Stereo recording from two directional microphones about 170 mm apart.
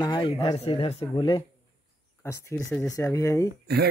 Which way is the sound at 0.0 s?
25° left (ahead or behind).